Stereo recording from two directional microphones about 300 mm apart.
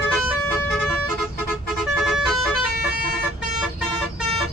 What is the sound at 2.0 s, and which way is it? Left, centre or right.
Vehicle horn, centre.